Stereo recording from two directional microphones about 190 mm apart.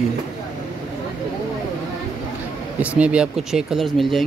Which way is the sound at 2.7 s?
5° right (ahead or behind).